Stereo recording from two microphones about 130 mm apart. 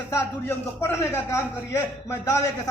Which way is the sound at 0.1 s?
20° left (ahead or behind).